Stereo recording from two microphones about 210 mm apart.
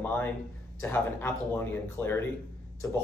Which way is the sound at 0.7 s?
10° left (ahead or behind).